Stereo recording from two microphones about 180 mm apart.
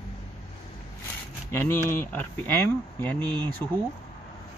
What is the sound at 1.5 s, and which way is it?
Speech, 10° left (ahead or behind).